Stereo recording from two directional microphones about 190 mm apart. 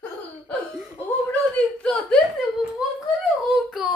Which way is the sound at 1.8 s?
Centre (ahead or behind).